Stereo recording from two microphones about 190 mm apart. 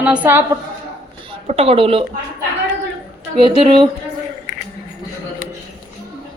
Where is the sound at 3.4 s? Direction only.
30° right (ahead or behind).